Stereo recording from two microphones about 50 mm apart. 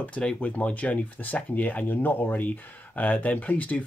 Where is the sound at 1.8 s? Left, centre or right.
Left.